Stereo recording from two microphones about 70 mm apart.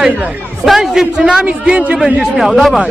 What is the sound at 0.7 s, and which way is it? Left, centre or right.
A man's voice, centre.